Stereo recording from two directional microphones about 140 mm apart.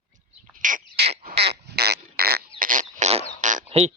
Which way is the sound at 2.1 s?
90° right.